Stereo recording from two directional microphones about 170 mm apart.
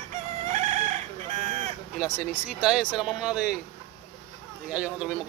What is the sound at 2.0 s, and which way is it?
A man's voice, 10° right (ahead or behind).